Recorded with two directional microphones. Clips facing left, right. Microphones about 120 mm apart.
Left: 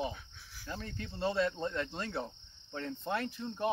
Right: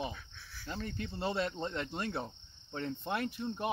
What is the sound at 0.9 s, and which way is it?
Cricket, 20° right (ahead or behind).